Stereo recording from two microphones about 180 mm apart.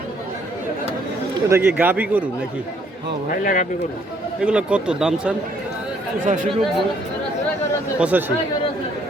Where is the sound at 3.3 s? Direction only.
45° left (ahead or behind).